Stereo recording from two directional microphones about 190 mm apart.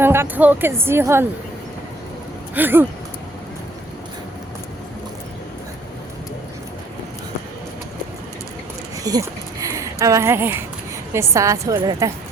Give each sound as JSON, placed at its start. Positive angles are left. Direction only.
{"t": 0.0, "sound": "speech", "side_deg": -10}
{"t": 2.6, "sound": "speech", "side_deg": -10}
{"t": 9.0, "sound": "a sound", "side_deg": -20}
{"t": 11.1, "sound": "a woman's voice", "side_deg": -15}